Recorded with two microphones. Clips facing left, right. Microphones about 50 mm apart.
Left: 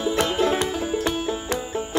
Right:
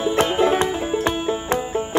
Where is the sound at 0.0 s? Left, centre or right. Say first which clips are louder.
Right 3 dB; right.